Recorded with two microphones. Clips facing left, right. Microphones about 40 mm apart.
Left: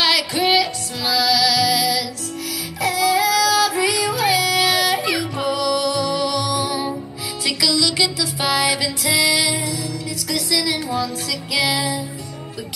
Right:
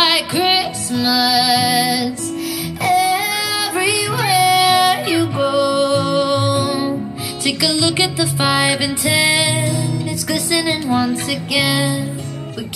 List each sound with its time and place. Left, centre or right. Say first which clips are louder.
0.3 s music: right 1 dB; right
0.9 s music: right 4 dB; centre
1.4 s music: right 3 dB; right
2.8 s music: right 3 dB; right
3.7 s yodeling: right 2 dB; centre
6.0 s music: right 5 dB; right
9.2 s music: right 3 dB; right